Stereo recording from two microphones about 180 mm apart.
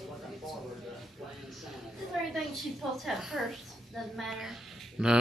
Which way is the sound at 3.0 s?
Centre (ahead or behind).